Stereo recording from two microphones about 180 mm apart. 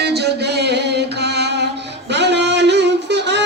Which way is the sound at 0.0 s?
65° right (ahead or behind).